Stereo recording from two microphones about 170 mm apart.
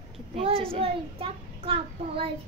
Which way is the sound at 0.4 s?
35° right (ahead or behind).